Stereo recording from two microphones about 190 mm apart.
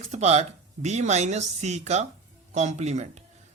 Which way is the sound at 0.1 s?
35° right (ahead or behind).